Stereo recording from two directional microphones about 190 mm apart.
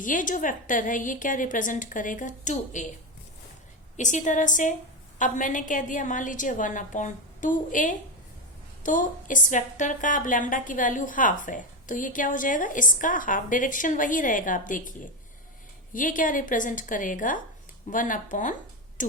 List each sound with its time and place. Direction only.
0.0 s a woman's voice: 45° left (ahead or behind)
3.9 s a woman's voice: 40° left (ahead or behind)
19.0 s a sound: 45° left (ahead or behind)